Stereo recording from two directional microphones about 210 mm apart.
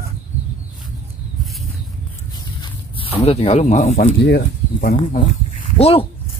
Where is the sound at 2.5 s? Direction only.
25° left (ahead or behind).